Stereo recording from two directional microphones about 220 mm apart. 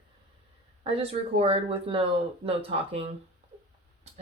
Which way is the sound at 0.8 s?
25° right (ahead or behind).